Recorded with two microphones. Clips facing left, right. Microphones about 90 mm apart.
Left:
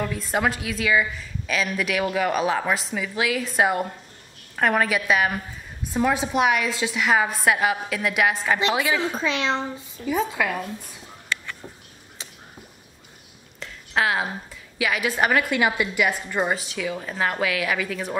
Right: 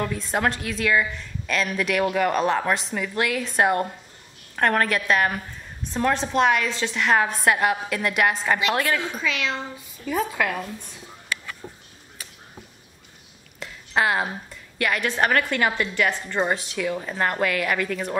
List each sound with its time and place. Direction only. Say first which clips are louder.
0.0 s a woman's voice: even; centre (ahead or behind)
9.1 s a woman's voice: left 3 dB; 25° left (ahead or behind)
10.0 s a woman's voice: left 1 dB; centre (ahead or behind)
13.6 s a woman's voice: right 1 dB; centre (ahead or behind)